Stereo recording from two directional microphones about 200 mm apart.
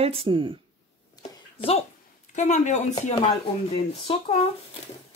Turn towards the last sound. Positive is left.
turn(degrees=30)  # may be behind; listen again after turning